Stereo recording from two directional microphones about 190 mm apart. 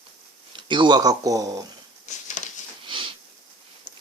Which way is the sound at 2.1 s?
40° left (ahead or behind).